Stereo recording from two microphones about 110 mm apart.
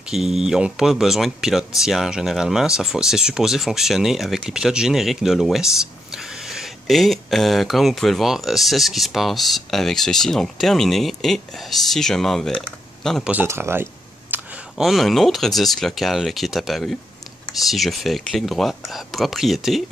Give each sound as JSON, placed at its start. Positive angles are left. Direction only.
{"t": 0.1, "sound": "speech", "side_deg": -5}
{"t": 13.2, "sound": "speech", "side_deg": -15}
{"t": 14.3, "sound": "a sound", "side_deg": -15}
{"t": 14.8, "sound": "speech", "side_deg": 0}